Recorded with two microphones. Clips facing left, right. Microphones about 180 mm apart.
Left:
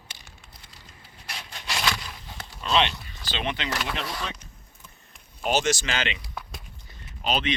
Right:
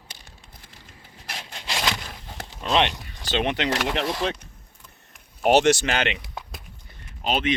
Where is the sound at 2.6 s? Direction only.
55° right (ahead or behind).